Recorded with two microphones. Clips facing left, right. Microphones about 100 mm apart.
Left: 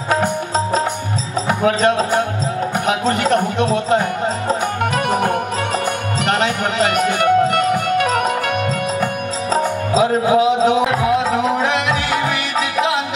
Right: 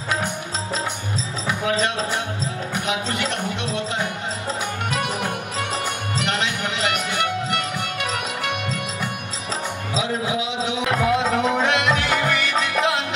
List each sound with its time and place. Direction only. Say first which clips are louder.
1.5 s music: left 7 dB; 45° left (ahead or behind)
2.7 s speech: left 7 dB; 45° left (ahead or behind)
4.5 s music: left 6 dB; 45° left (ahead or behind)
10.9 s music: left 3 dB; centre (ahead or behind)